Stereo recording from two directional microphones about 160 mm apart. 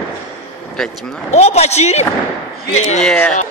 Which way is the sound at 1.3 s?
40° left (ahead or behind).